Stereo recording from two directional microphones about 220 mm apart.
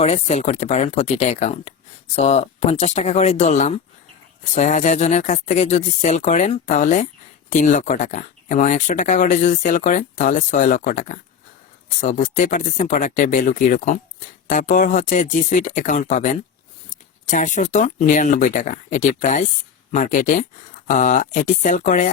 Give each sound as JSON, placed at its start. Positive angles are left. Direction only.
{"t": 0.0, "sound": "speech", "side_deg": 30}